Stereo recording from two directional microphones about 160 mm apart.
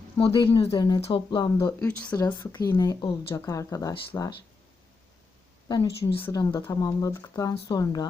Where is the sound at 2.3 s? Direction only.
20° left (ahead or behind).